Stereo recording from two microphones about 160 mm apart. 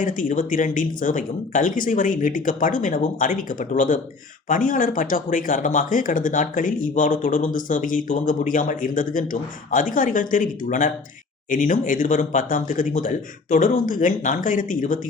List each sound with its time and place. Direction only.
0.0 s speech: 55° left (ahead or behind)